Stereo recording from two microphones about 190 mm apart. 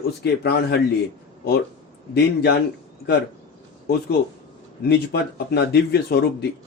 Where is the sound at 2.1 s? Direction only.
60° left (ahead or behind).